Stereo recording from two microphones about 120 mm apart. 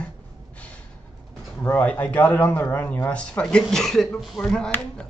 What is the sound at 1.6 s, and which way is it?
Speech, 10° left (ahead or behind).